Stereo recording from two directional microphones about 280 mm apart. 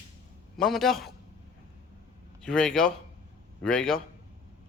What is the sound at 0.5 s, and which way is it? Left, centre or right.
Speech, centre.